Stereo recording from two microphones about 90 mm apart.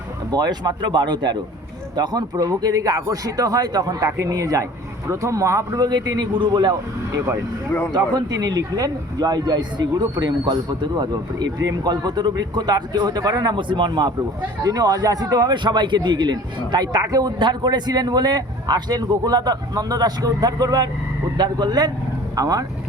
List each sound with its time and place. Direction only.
0.3 s a man's voice: 50° right (ahead or behind)
7.9 s a man's voice: 50° right (ahead or behind)
14.6 s a man's voice: 45° right (ahead or behind)